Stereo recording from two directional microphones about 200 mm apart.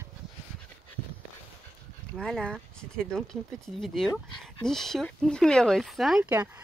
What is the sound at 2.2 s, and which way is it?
Speech, 5° left (ahead or behind).